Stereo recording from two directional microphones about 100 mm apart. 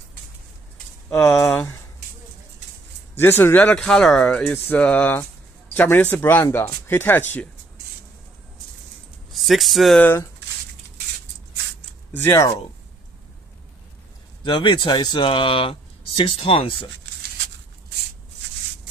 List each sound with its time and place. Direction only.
1.2 s speech: 5° left (ahead or behind)
1.5 s speech: 20° left (ahead or behind)
3.2 s speech: 20° left (ahead or behind)
3.8 s speech: 5° left (ahead or behind)
9.3 s speech: centre (ahead or behind)
12.2 s speech: 25° left (ahead or behind)
14.4 s speech: 55° left (ahead or behind)